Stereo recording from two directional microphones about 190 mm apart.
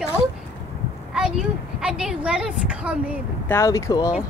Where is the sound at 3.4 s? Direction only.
15° left (ahead or behind).